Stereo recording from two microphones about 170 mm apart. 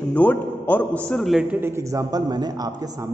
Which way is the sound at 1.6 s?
15° right (ahead or behind).